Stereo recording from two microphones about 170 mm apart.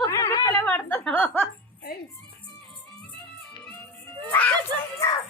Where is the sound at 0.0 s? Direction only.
15° left (ahead or behind).